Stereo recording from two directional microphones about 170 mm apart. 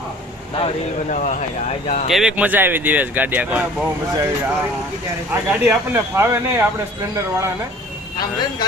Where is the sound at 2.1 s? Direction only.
5° right (ahead or behind).